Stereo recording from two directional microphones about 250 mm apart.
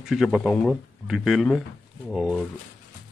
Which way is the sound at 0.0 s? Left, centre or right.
Centre.